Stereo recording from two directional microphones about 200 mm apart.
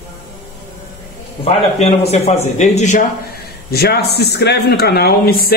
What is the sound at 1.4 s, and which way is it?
A man's voice, 30° left (ahead or behind).